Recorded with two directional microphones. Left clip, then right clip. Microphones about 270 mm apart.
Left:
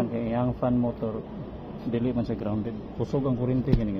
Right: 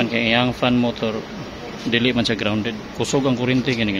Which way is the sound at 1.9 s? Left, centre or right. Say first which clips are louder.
Right 10 dB; right.